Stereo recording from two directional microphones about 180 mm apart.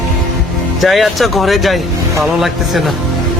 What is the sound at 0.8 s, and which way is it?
Speech, centre (ahead or behind).